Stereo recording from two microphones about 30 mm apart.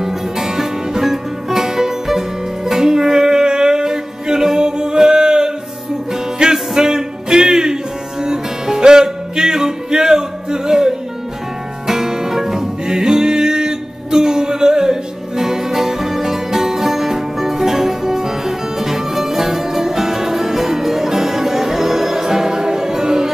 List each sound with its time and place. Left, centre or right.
0.0 s music: centre
12.8 s music: right